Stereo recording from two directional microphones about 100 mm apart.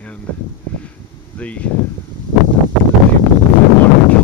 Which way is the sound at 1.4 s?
15° left (ahead or behind).